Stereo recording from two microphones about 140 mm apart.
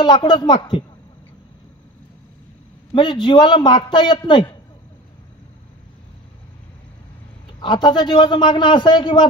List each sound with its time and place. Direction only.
0.0 s a man's voice: 35° left (ahead or behind)
2.9 s a man's voice: 35° left (ahead or behind)
7.6 s a man's voice: 35° left (ahead or behind)